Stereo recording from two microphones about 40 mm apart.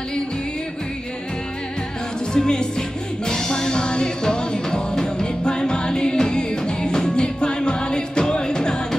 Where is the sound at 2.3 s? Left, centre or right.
Centre.